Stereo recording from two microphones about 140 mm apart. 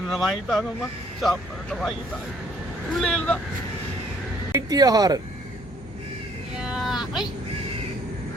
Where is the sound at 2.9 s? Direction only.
5° left (ahead or behind).